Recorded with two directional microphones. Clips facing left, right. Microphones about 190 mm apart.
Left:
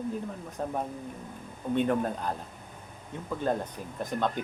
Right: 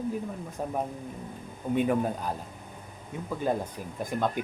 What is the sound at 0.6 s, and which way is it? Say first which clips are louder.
Speech: right 1 dB; 10° right (ahead or behind).